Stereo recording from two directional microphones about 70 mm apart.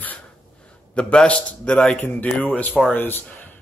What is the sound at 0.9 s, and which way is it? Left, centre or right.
A man's voice, centre.